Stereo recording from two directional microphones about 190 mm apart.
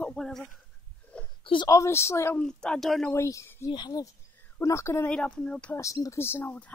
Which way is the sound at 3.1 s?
15° left (ahead or behind).